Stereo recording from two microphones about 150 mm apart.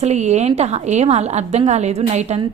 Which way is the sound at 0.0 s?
50° right (ahead or behind).